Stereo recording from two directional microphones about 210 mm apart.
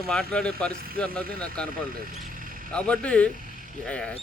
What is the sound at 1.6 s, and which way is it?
Speech, 45° right (ahead or behind).